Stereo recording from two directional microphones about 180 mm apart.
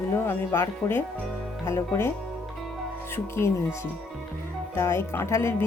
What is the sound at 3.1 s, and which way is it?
Speech, 15° left (ahead or behind).